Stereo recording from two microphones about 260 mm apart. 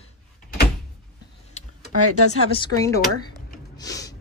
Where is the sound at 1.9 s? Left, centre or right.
Left.